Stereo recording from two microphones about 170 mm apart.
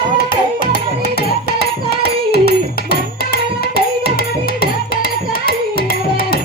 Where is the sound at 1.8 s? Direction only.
65° left (ahead or behind).